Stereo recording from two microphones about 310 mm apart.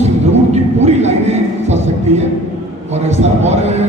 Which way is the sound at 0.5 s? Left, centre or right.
Right.